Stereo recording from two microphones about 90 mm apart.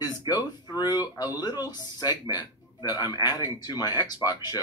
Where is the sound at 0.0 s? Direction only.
50° left (ahead or behind).